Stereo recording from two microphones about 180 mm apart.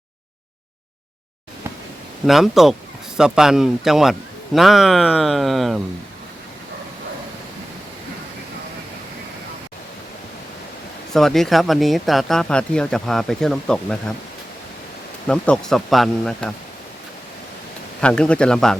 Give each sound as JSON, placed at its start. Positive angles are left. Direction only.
{"t": 2.2, "sound": "speech", "side_deg": 0}
{"t": 11.1, "sound": "speech", "side_deg": 0}
{"t": 15.3, "sound": "speech", "side_deg": 5}
{"t": 18.0, "sound": "speech", "side_deg": 5}